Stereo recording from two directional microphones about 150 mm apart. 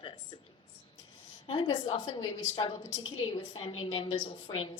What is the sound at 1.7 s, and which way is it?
A woman's voice, 40° left (ahead or behind).